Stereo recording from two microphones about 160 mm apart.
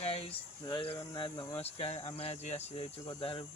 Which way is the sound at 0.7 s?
35° left (ahead or behind).